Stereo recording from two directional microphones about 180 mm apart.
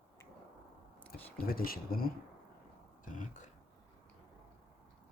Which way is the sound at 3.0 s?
45° left (ahead or behind).